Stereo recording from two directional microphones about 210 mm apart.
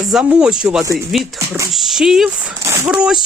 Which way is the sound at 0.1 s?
5° right (ahead or behind).